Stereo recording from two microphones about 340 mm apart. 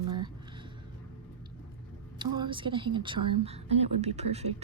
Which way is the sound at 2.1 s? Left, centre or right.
Centre.